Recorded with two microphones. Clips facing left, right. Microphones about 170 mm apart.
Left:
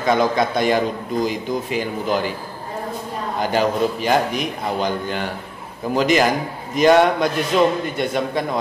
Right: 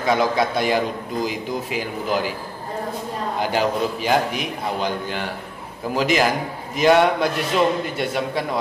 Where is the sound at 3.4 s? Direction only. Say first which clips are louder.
Left 3 dB; 5° right (ahead or behind).